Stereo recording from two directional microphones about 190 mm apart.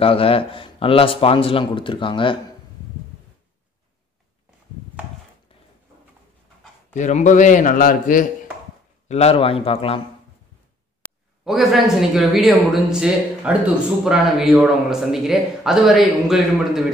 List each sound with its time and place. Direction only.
0.0 s a man's voice: 30° left (ahead or behind)
6.9 s a man's voice: 40° left (ahead or behind)
9.1 s a man's voice: 30° left (ahead or behind)
11.4 s a man's voice: centre (ahead or behind)